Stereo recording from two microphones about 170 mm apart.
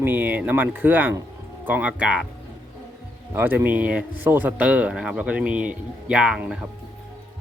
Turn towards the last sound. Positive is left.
turn(degrees=-5)  # may be behind; listen again after turning